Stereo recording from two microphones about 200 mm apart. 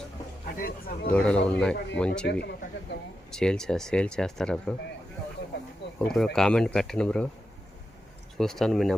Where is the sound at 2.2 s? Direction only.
55° left (ahead or behind).